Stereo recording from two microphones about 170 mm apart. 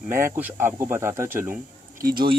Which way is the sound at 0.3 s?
10° right (ahead or behind).